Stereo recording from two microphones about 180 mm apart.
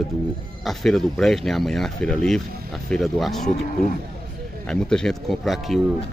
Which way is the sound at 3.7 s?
50° left (ahead or behind).